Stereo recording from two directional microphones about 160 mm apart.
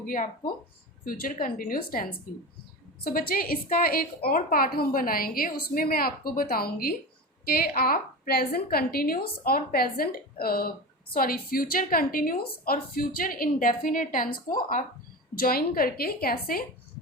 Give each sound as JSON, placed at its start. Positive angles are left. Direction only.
{"t": 0.0, "sound": "a woman's voice", "side_deg": 60}